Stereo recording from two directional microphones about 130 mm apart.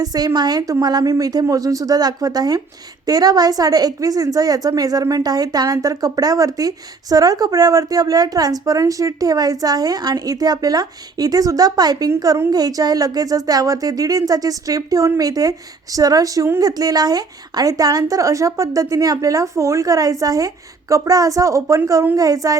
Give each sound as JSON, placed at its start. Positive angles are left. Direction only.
{"t": 0.0, "sound": "a woman's voice", "side_deg": -30}